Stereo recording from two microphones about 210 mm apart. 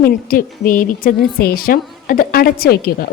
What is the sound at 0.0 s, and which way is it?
A woman's voice, 45° left (ahead or behind).